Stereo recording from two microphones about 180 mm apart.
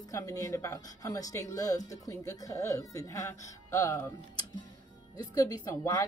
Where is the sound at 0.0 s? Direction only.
20° left (ahead or behind).